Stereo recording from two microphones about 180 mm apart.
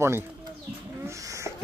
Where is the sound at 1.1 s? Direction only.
15° right (ahead or behind).